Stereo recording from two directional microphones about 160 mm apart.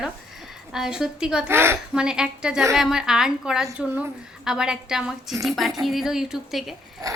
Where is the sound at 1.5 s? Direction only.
15° right (ahead or behind).